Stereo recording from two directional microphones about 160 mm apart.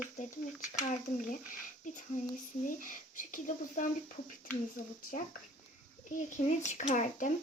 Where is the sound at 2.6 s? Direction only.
55° left (ahead or behind).